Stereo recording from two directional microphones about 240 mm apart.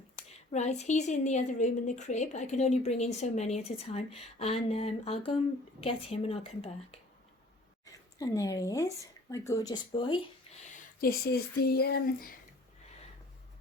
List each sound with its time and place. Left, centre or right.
0.5 s a woman's voice: left
8.2 s speech: centre; by 12.4 s left